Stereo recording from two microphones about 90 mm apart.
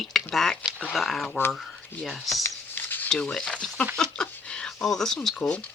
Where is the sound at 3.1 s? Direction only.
10° left (ahead or behind).